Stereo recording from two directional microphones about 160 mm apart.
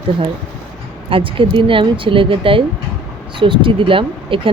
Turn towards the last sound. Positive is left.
turn(degrees=-35)  # may be behind; listen again after turning